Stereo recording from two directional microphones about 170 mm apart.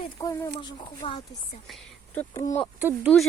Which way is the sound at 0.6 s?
30° left (ahead or behind).